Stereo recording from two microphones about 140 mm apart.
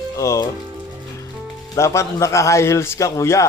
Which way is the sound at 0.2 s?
20° left (ahead or behind).